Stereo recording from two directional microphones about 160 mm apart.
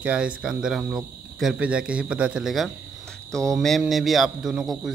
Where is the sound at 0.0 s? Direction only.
10° right (ahead or behind).